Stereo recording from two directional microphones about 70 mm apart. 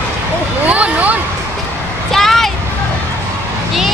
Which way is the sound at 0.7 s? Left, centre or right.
Right.